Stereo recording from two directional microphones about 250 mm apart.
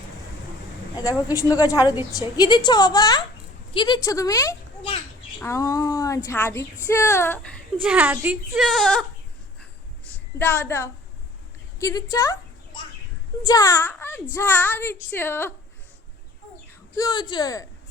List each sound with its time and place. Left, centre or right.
0.9 s a woman's voice: centre
7.8 s speech: centre
10.3 s a woman's voice: centre
11.8 s a sound: centre
13.4 s a woman's voice: centre
17.0 s a woman's voice: centre